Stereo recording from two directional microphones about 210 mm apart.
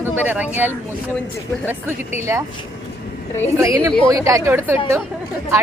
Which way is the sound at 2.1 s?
15° right (ahead or behind).